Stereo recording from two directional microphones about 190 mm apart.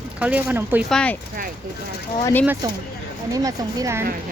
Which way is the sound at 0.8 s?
5° left (ahead or behind).